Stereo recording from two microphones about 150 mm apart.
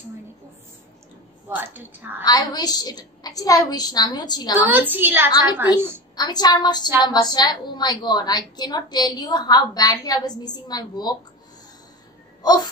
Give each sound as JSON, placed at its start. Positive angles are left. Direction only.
{"t": 1.5, "sound": "a woman's voice", "side_deg": -10}
{"t": 2.2, "sound": "a woman's voice", "side_deg": 25}
{"t": 4.6, "sound": "a woman's voice", "side_deg": -10}
{"t": 6.1, "sound": "a woman's voice", "side_deg": 25}
{"t": 12.4, "sound": "speech", "side_deg": 25}